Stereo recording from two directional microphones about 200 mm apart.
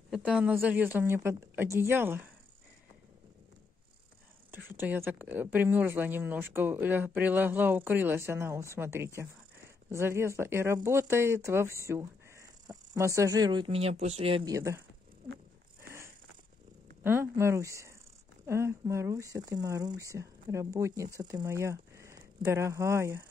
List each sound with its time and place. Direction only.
0.1 s speech: 5° right (ahead or behind)
4.7 s speech: 10° right (ahead or behind); by 14.5 s 30° right (ahead or behind)
14.5 s speech: 15° right (ahead or behind)
17.0 s speech: 10° right (ahead or behind)